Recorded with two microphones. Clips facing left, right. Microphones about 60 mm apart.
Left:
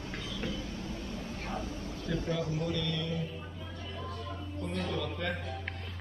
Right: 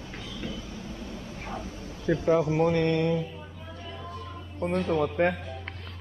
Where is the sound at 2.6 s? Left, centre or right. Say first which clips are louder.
Right 11 dB; right.